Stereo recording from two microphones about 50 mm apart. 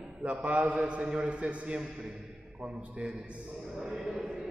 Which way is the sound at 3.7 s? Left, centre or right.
Centre.